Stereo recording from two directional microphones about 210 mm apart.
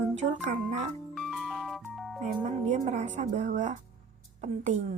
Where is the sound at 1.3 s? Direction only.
Centre (ahead or behind).